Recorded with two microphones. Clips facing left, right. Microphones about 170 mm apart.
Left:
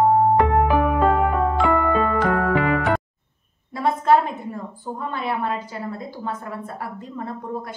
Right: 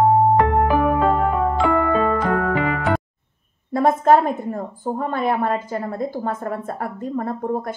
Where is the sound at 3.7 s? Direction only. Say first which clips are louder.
Right 3 dB; 45° right (ahead or behind).